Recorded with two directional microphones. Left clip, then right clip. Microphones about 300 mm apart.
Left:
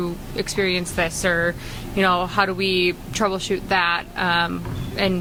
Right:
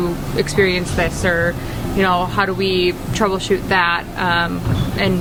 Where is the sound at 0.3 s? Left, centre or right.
Centre.